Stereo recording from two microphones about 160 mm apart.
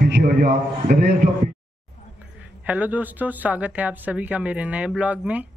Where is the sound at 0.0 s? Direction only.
75° right (ahead or behind).